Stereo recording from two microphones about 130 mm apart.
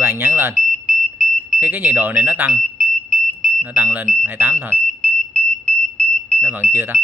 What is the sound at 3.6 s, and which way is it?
Speech, 10° right (ahead or behind).